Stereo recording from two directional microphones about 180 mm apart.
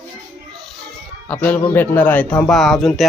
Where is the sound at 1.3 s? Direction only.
10° left (ahead or behind).